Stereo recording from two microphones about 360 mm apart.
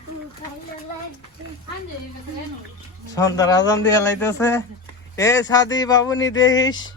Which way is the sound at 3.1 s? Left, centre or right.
Centre.